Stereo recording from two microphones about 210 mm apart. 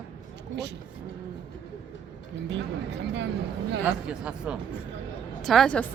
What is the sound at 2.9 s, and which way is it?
Speech, 55° right (ahead or behind).